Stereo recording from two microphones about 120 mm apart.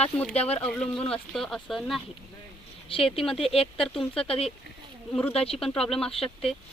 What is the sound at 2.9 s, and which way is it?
Speech, 50° left (ahead or behind).